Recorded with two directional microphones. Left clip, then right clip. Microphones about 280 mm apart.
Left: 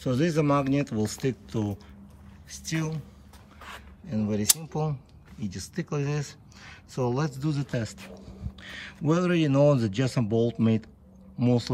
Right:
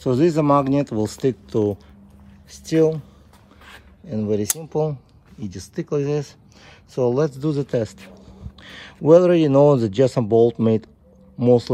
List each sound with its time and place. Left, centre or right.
0.0 s speech: centre
4.1 s speech: centre